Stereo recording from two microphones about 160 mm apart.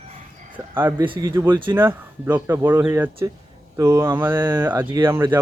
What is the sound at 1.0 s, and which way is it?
Speech, 30° right (ahead or behind).